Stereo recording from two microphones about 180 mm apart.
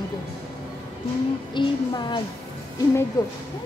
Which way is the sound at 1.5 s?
25° left (ahead or behind).